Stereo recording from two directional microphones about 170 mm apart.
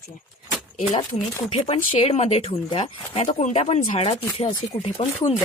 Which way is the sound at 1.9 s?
35° left (ahead or behind).